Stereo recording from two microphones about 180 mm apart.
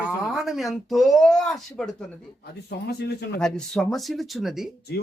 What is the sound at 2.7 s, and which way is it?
Speech, 65° left (ahead or behind).